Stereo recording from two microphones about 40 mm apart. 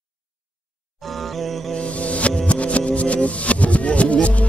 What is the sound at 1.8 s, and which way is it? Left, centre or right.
Music, left.